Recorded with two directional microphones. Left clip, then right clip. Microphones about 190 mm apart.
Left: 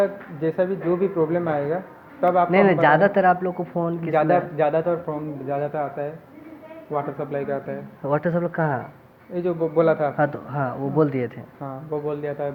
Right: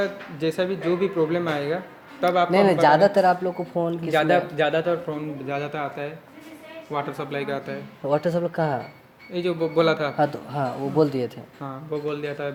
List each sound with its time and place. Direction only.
0.0 s a man's voice: 55° right (ahead or behind)
2.5 s speech: 25° right (ahead or behind)
4.2 s a man's voice: 50° right (ahead or behind)
8.0 s speech: 30° right (ahead or behind)
9.3 s a man's voice: 65° right (ahead or behind)
10.2 s speech: 30° right (ahead or behind)
11.6 s a man's voice: 65° right (ahead or behind)